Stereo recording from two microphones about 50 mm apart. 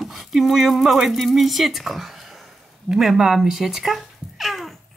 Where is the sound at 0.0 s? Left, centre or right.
Centre.